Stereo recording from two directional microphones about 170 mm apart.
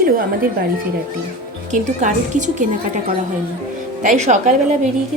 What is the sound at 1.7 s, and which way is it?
A woman's voice, 45° right (ahead or behind).